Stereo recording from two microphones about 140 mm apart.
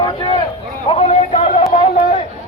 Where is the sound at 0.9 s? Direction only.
50° left (ahead or behind).